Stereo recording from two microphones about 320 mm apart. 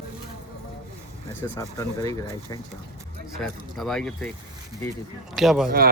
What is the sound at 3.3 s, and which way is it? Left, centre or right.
Speech, centre.